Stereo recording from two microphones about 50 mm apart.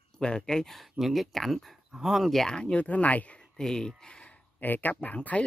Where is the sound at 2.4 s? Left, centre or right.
Centre.